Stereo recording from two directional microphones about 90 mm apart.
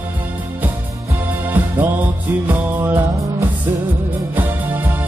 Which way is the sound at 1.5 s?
20° right (ahead or behind).